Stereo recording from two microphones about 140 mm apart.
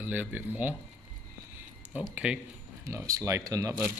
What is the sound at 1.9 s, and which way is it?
Speech, 10° right (ahead or behind).